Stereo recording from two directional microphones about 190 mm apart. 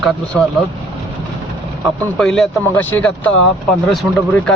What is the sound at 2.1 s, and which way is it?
Speech, centre (ahead or behind).